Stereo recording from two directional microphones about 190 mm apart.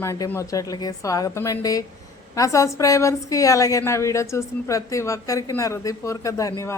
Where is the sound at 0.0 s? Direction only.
15° left (ahead or behind).